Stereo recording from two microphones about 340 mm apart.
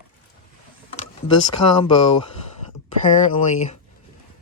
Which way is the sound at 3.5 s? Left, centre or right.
Centre.